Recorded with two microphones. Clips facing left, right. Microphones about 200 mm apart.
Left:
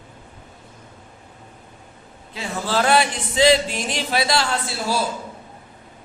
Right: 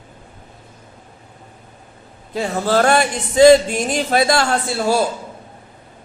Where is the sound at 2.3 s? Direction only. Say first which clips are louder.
Right 7 dB; 45° right (ahead or behind).